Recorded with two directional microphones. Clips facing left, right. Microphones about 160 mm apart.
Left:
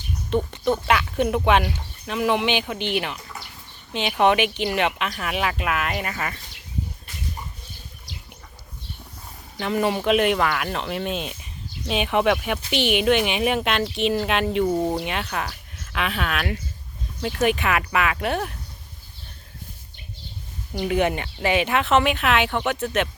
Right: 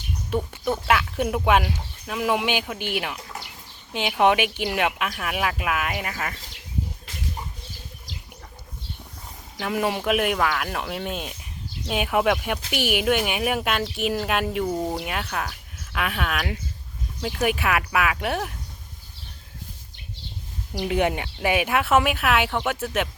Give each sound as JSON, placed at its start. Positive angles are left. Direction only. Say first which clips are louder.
{"t": 0.3, "sound": "speech", "louder": "left 3 dB", "side_deg": -10}
{"t": 9.6, "sound": "speech", "louder": "left 2 dB", "side_deg": -5}
{"t": 14.7, "sound": "speech", "louder": "left 4 dB", "side_deg": 10}
{"t": 14.9, "sound": "speech", "louder": "left 2 dB", "side_deg": -5}
{"t": 20.7, "sound": "speech", "louder": "left 1 dB", "side_deg": -15}